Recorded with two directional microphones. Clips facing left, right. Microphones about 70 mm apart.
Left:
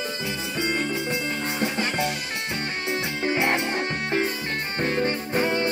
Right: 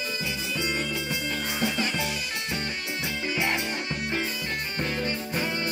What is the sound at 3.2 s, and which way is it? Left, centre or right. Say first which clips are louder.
Music: left 5 dB; left.